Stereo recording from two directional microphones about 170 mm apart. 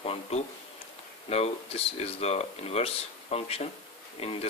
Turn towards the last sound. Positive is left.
turn(degrees=35)  # may be behind; listen again after turning